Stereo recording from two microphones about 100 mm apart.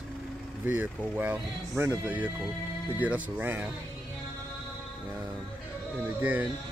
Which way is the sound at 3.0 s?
15° right (ahead or behind).